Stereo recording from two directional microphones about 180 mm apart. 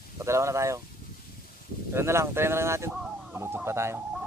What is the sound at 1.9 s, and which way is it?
Speech, 15° right (ahead or behind).